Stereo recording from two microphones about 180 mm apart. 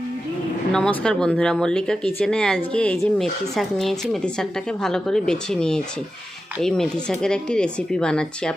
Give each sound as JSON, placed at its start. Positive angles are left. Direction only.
{"t": 0.7, "sound": "speech", "side_deg": 5}